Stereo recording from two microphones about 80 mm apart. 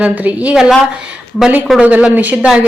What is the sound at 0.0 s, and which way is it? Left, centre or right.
Speech, centre.